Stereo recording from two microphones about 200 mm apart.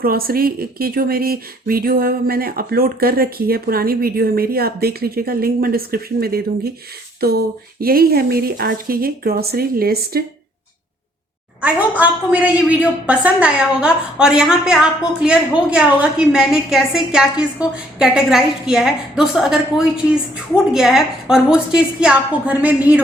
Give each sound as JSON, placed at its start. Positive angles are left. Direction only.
{"t": 0.0, "sound": "speech", "side_deg": -50}
{"t": 11.6, "sound": "a woman's voice", "side_deg": -5}